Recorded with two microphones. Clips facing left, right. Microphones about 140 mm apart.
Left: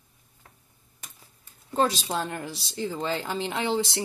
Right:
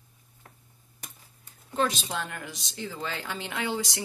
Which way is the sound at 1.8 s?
35° left (ahead or behind).